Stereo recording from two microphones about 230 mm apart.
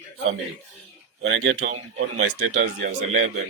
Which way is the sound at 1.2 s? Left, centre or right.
Right.